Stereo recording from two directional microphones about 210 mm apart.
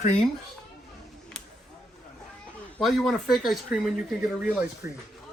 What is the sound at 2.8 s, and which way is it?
Speech, centre (ahead or behind).